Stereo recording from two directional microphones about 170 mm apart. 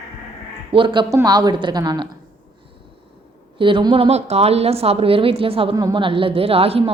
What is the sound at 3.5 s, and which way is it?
A woman's voice, 30° right (ahead or behind).